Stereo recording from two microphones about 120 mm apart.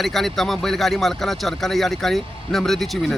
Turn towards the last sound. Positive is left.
turn(degrees=0)  # may be behind; listen again after turning